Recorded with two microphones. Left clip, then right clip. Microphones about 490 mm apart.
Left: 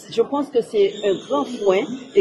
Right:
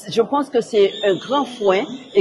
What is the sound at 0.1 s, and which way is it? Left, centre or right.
A man's voice, right.